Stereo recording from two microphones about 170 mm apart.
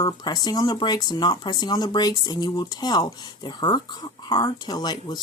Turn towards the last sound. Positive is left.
turn(degrees=25)  # may be behind; listen again after turning